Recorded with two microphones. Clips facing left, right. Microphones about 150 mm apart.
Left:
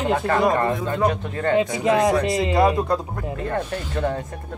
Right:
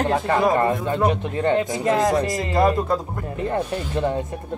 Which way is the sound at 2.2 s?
20° left (ahead or behind).